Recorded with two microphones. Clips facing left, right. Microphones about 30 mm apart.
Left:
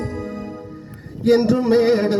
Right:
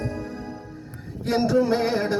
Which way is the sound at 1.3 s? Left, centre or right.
Left.